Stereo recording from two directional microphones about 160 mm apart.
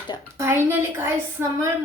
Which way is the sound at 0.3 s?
15° right (ahead or behind).